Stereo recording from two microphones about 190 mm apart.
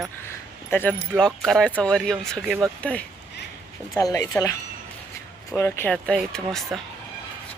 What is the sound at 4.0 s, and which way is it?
Speech, 20° left (ahead or behind).